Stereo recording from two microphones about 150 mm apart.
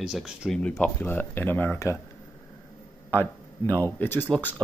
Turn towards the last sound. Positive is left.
turn(degrees=15)  # may be behind; listen again after turning